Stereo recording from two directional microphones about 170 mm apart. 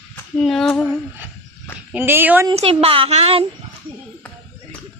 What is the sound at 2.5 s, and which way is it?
Speech, 35° right (ahead or behind).